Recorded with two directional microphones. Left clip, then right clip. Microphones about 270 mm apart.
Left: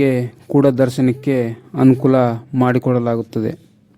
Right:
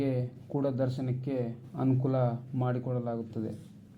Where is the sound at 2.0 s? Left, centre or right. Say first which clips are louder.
Left 16 dB; left.